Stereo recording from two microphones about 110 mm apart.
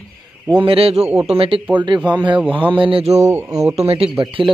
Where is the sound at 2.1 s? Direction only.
45° right (ahead or behind).